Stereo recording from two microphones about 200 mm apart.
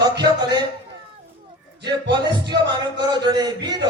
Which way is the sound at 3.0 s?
20° right (ahead or behind).